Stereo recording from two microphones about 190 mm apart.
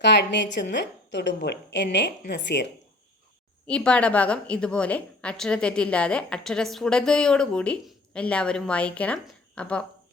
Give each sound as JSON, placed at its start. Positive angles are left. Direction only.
{"t": 0.0, "sound": "a woman's voice", "side_deg": 70}
{"t": 3.7, "sound": "a woman's voice", "side_deg": 5}